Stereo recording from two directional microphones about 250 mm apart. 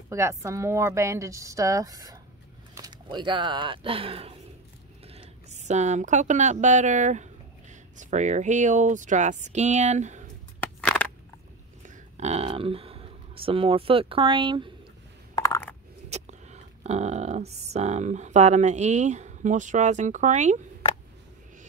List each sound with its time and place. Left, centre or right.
0.1 s a woman's voice: centre; by 10.3 s right
10.8 s crushing: centre
11.8 s speech: right
15.3 s a sound: centre
16.1 s speech: right